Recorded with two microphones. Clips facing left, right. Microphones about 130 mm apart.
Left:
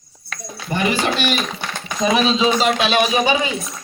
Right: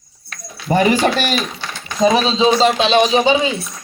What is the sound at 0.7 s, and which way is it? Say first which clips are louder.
Speech: right 6 dB; 40° right (ahead or behind).